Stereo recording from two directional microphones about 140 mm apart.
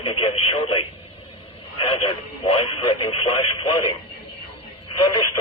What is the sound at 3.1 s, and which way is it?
Speech, 45° left (ahead or behind).